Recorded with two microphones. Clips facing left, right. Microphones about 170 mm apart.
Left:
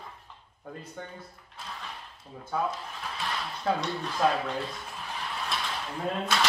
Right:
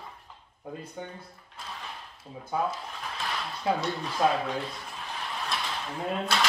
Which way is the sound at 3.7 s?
10° right (ahead or behind).